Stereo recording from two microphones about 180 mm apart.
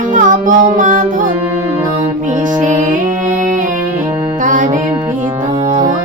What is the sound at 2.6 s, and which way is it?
Music, 45° right (ahead or behind).